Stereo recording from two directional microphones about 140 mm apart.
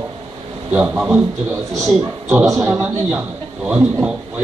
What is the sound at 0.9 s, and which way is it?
Speech, centre (ahead or behind).